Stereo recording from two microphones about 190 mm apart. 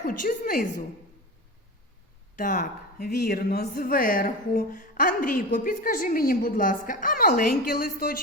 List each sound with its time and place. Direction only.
0.0 s speech: 50° left (ahead or behind)
2.3 s speech: 45° left (ahead or behind)